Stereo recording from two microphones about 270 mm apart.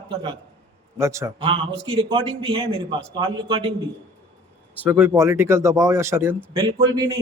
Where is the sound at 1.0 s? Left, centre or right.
Centre.